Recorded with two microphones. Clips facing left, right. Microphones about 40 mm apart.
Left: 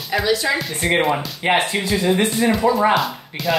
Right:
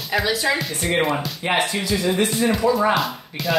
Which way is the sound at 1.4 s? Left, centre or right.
Left.